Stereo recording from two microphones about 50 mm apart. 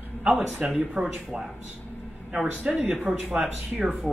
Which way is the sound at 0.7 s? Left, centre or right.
Centre.